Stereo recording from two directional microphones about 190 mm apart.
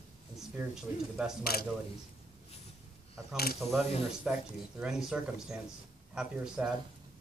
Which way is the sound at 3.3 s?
55° left (ahead or behind).